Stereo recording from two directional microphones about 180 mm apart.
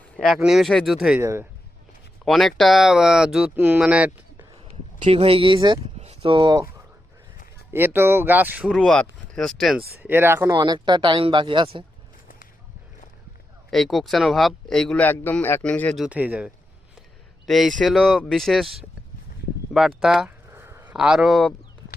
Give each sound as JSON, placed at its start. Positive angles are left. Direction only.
{"t": 0.2, "sound": "speech", "side_deg": 0}
{"t": 1.2, "sound": "speech", "side_deg": -15}
{"t": 2.2, "sound": "speech", "side_deg": 0}
{"t": 5.0, "sound": "speech", "side_deg": -30}
{"t": 7.7, "sound": "speech", "side_deg": -10}
{"t": 10.0, "sound": "speech", "side_deg": -10}
{"t": 10.5, "sound": "speech", "side_deg": -25}
{"t": 13.7, "sound": "speech", "side_deg": 0}
{"t": 16.0, "sound": "speech", "side_deg": -10}
{"t": 20.0, "sound": "speech", "side_deg": -5}
{"t": 20.5, "sound": "a sound", "side_deg": -15}
{"t": 20.9, "sound": "speech", "side_deg": -5}